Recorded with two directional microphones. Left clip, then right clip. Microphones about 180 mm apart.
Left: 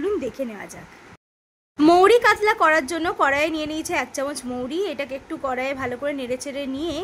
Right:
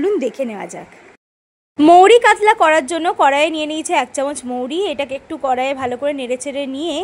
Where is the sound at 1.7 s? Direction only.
10° right (ahead or behind).